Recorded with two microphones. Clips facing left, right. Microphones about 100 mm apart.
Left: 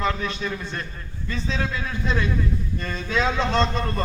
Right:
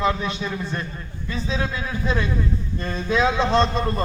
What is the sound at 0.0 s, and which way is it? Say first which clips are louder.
Speech: right 2 dB; 20° right (ahead or behind).